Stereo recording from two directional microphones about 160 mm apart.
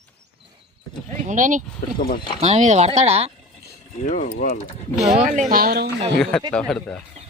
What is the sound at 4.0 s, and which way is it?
Speech, 50° left (ahead or behind).